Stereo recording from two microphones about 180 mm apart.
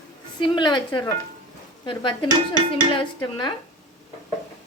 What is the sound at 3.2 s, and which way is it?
Speech, 25° left (ahead or behind).